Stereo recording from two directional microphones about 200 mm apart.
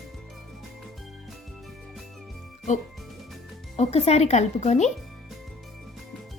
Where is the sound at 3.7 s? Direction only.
30° left (ahead or behind).